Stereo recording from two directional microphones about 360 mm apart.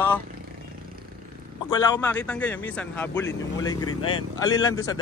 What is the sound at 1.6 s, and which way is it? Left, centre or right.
Speech, centre.